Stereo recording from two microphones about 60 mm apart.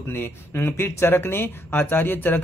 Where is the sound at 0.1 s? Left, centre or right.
Left.